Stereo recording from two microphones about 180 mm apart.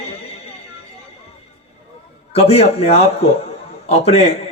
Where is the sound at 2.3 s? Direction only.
35° left (ahead or behind).